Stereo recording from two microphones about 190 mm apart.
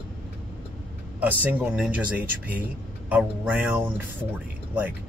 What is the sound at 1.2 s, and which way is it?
Speech, 10° right (ahead or behind).